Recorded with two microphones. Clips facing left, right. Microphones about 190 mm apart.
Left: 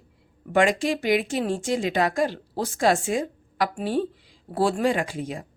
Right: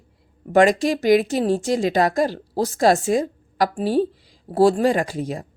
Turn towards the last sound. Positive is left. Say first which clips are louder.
# right 4 dB
turn(degrees=-40)  # may be behind; listen again after turning